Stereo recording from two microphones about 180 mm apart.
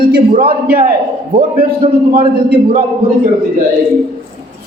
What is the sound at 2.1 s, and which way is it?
Speech, 60° right (ahead or behind).